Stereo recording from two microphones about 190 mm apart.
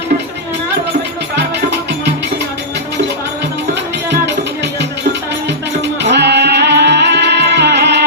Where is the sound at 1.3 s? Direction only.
60° right (ahead or behind).